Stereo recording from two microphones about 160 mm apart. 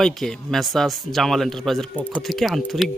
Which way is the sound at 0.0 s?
5° left (ahead or behind).